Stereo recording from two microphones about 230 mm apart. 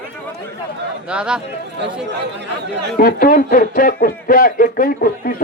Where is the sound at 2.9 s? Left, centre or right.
Left.